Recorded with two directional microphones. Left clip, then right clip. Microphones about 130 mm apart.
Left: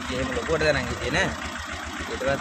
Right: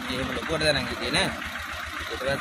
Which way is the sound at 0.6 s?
5° left (ahead or behind).